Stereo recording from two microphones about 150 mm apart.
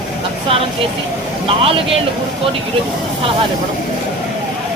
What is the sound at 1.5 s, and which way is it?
Speech, 40° right (ahead or behind).